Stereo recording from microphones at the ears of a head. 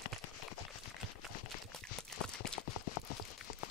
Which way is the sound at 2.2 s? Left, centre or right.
Left.